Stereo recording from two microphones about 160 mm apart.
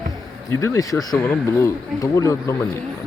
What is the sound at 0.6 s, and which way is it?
Speech, 20° left (ahead or behind).